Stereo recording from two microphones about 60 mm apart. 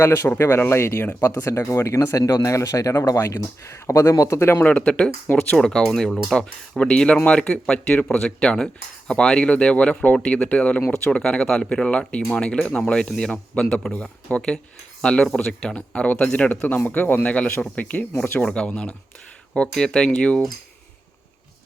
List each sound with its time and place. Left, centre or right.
0.0 s speech: left
4.4 s speech: left
4.6 s speech: left
18.4 s speech: centre